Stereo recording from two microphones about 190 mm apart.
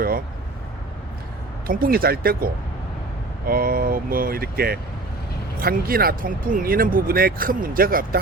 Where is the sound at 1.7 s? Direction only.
50° right (ahead or behind).